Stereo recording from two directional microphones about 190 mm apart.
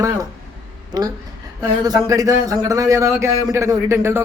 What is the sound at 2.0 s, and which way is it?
A man's voice, 15° right (ahead or behind).